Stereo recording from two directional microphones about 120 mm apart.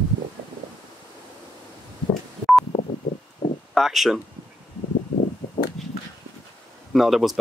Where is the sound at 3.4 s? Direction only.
50° left (ahead or behind).